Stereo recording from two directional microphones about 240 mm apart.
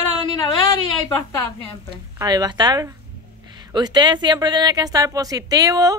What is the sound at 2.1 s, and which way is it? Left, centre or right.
A woman's voice, centre.